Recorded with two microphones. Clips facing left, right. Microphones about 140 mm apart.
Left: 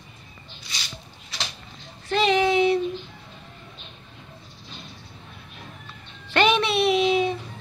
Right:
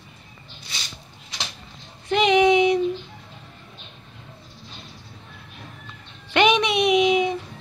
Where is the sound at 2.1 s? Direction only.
15° right (ahead or behind).